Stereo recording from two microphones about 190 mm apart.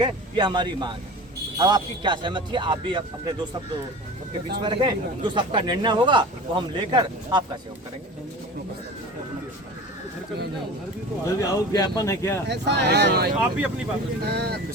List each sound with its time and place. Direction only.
0.0 s speech: 25° right (ahead or behind)
4.6 s speech: 25° right (ahead or behind)
11.3 s speech: 15° left (ahead or behind)
12.5 s speech: 60° right (ahead or behind)